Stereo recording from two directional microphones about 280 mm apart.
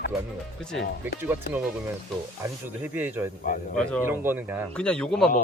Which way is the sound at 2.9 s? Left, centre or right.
Centre.